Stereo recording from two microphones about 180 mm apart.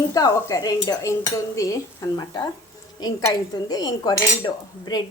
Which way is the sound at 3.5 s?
20° left (ahead or behind).